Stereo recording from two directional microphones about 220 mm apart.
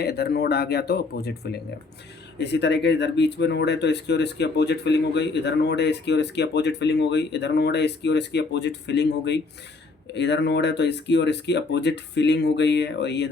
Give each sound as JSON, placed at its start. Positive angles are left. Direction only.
{"t": 0.0, "sound": "speech", "side_deg": 45}
{"t": 2.4, "sound": "speech", "side_deg": 50}